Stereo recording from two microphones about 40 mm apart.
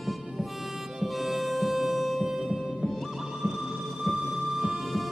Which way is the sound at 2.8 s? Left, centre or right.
Centre.